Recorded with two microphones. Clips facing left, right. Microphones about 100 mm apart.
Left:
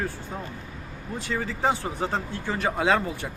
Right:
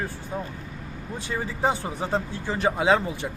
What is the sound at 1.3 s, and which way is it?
Speech, 20° right (ahead or behind).